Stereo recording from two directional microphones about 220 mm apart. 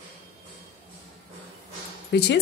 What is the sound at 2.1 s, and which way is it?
Speech, 50° left (ahead or behind).